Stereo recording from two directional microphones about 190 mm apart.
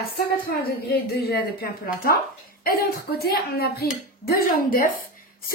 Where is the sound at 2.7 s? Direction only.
50° left (ahead or behind).